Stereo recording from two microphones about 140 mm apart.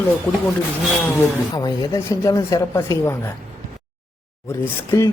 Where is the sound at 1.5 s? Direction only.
30° left (ahead or behind).